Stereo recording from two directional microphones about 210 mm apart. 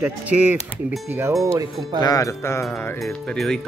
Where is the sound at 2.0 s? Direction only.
15° left (ahead or behind).